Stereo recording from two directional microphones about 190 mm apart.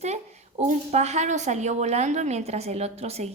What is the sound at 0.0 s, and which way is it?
A woman's voice, 35° right (ahead or behind).